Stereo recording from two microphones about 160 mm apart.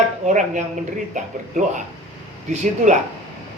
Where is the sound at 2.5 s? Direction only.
50° right (ahead or behind).